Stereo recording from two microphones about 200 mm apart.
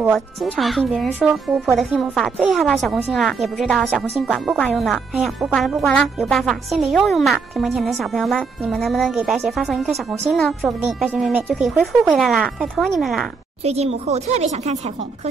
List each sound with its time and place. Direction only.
0.0 s speech: centre (ahead or behind)
13.7 s speech: 30° right (ahead or behind)